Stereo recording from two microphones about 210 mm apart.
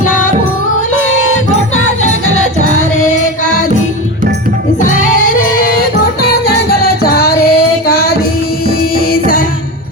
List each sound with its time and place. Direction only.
4.8 s music: 35° left (ahead or behind)